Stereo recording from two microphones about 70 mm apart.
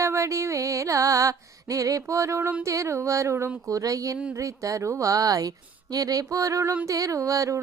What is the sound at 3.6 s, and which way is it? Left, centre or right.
Carnatic music, right.